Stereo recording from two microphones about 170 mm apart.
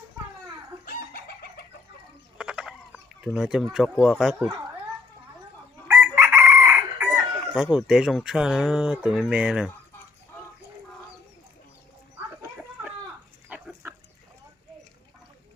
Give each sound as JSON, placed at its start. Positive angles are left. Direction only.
{"t": 0.9, "sound": "chicken", "side_deg": 65}
{"t": 2.4, "sound": "chicken", "side_deg": -5}
{"t": 3.2, "sound": "speech", "side_deg": 0}
{"t": 6.1, "sound": "chicken", "side_deg": -15}
{"t": 7.5, "sound": "speech", "side_deg": -5}
{"t": 13.5, "sound": "livestock", "side_deg": -10}